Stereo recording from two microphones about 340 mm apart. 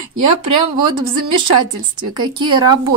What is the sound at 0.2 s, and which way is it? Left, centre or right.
Speech, right.